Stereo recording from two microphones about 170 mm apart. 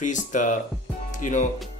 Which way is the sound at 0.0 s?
45° left (ahead or behind).